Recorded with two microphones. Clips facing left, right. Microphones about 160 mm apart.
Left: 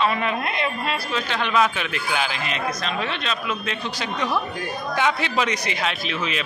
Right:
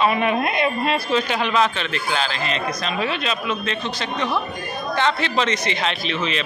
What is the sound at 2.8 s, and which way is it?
Speech, 5° right (ahead or behind).